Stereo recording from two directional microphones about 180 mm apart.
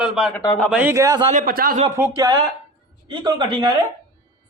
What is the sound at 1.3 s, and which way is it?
Speech, 50° right (ahead or behind).